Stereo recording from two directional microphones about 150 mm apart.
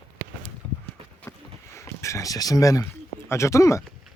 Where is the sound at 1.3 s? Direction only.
20° left (ahead or behind).